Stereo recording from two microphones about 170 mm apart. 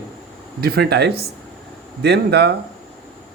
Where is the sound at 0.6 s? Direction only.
65° right (ahead or behind).